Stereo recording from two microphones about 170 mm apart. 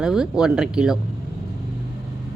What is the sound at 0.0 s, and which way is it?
Speech, 5° right (ahead or behind).